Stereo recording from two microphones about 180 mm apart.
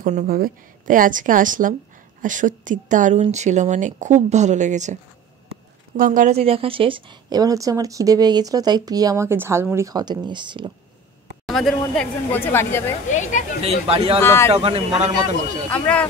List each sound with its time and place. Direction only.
0.0 s speech: 40° right (ahead or behind)
0.3 s a woman's voice: 50° right (ahead or behind)
5.9 s a woman's voice: 50° right (ahead or behind)
6.4 s a woman's voice: 30° right (ahead or behind)
11.4 s speech: centre (ahead or behind)
13.1 s speech: 45° left (ahead or behind)
13.6 s speech: 35° right (ahead or behind)
14.2 s speech: 15° left (ahead or behind)
14.5 s speech: 35° right (ahead or behind)
15.7 s speech: 5° left (ahead or behind)